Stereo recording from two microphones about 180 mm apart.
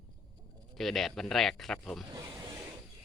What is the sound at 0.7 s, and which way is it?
Speech, centre (ahead or behind).